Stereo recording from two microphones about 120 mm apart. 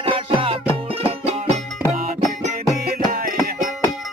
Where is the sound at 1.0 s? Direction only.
65° right (ahead or behind).